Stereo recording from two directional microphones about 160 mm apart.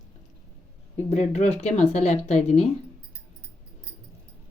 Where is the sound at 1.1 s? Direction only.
45° left (ahead or behind).